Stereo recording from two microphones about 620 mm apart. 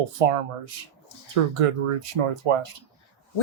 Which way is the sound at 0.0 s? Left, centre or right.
Right.